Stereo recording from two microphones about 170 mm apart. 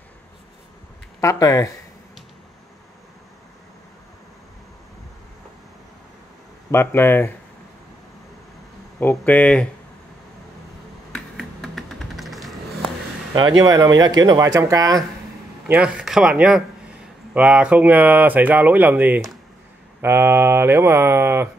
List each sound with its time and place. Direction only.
1.2 s speech: 20° left (ahead or behind)
6.7 s speech: 15° left (ahead or behind)
9.0 s speech: 10° left (ahead or behind)
11.1 s finger snapping: 5° left (ahead or behind)
13.3 s speech: 25° right (ahead or behind)
15.6 s speech: 5° right (ahead or behind)